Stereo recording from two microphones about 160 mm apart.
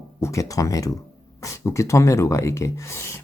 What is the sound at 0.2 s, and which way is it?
Speech, 20° left (ahead or behind).